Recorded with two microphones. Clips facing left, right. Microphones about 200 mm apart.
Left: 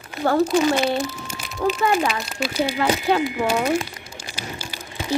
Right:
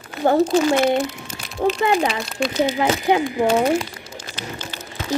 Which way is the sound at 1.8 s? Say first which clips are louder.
Right 1 dB; 35° right (ahead or behind).